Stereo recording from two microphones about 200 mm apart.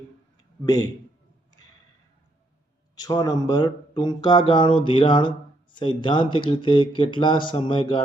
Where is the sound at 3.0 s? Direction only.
20° left (ahead or behind).